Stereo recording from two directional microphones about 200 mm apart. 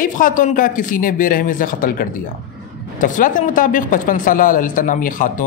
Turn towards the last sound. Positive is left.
turn(degrees=40)  # may be behind; listen again after turning